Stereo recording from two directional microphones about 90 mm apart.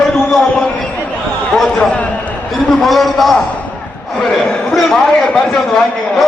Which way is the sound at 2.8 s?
Centre (ahead or behind).